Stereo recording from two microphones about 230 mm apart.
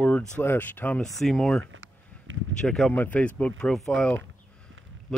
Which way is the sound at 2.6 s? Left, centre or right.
Centre.